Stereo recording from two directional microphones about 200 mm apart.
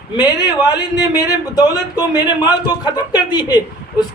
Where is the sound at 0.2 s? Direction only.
20° left (ahead or behind).